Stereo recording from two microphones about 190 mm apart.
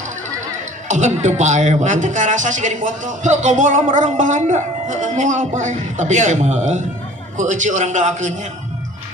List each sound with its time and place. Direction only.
0.8 s a man's voice: 40° right (ahead or behind)